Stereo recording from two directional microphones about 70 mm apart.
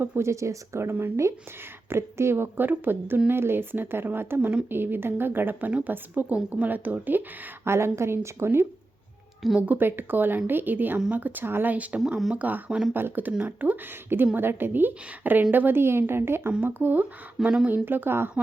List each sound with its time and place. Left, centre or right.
0.2 s a woman's voice: right
9.6 s a woman's voice: right